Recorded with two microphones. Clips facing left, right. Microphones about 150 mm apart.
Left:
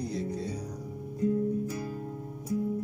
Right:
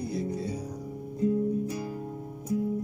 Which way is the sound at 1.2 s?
20° right (ahead or behind).